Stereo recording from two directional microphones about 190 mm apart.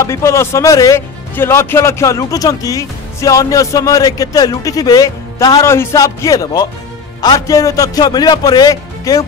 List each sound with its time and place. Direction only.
0.0 s a man's voice: 15° left (ahead or behind)